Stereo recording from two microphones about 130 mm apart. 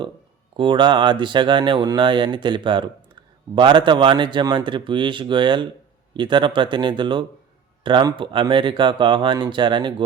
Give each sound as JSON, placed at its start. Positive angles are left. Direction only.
{"t": 0.5, "sound": "speech", "side_deg": -40}